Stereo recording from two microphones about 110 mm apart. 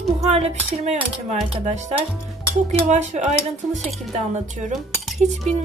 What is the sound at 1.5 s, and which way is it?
Speech, 90° right.